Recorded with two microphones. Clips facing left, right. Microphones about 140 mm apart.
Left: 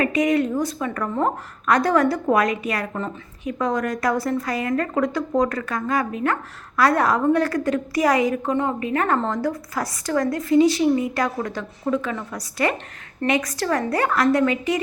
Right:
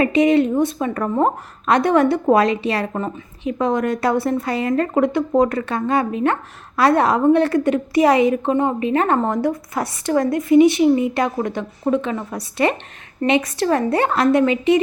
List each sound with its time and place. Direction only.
0.0 s a woman's voice: 25° right (ahead or behind)